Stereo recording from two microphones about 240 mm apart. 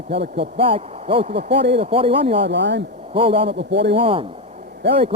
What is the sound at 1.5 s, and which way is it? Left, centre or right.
Speech, right.